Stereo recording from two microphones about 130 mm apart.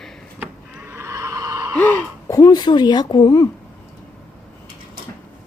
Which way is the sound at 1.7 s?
15° left (ahead or behind).